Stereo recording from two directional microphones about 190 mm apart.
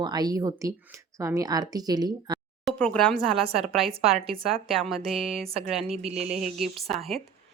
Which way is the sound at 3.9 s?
30° right (ahead or behind).